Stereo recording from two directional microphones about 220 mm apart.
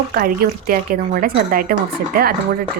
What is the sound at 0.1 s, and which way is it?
A woman's voice, 40° right (ahead or behind).